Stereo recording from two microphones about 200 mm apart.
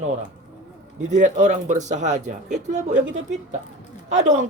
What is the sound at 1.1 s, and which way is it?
Speech, 35° right (ahead or behind).